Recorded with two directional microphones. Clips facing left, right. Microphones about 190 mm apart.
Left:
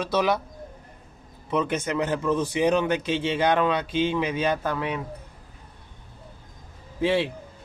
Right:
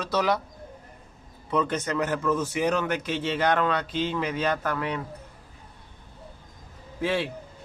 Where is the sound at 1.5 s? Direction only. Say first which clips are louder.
Left 1 dB; 10° left (ahead or behind).